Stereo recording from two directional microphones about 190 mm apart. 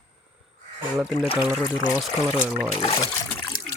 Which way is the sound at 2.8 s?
25° left (ahead or behind).